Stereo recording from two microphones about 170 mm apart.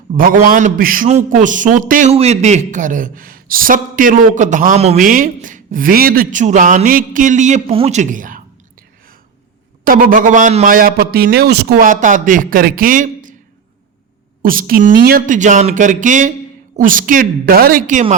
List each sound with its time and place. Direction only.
0.1 s speech: 50° right (ahead or behind)
2.1 s speech: 40° right (ahead or behind)
5.0 s speech: 55° right (ahead or behind)
9.8 s a man's voice: 55° right (ahead or behind)
14.4 s speech: 55° right (ahead or behind)